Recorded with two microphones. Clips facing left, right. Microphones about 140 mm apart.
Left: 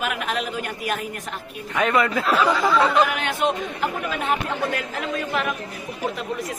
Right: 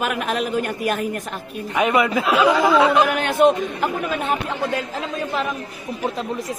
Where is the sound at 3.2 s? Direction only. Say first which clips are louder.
Right 8 dB; 45° right (ahead or behind).